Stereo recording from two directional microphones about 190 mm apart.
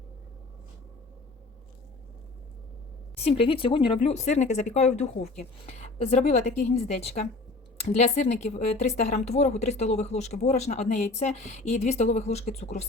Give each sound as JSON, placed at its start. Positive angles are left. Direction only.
{"t": 3.2, "sound": "speech", "side_deg": 30}